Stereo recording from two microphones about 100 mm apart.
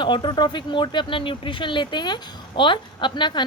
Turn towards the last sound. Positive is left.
turn(degrees=50)  # may be behind; listen again after turning